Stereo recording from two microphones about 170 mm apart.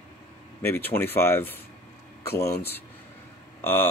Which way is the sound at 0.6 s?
15° left (ahead or behind).